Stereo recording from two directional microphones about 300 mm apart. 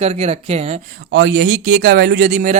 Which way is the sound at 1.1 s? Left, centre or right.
Right.